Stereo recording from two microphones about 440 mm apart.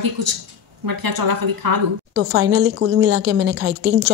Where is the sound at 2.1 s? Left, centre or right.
Right.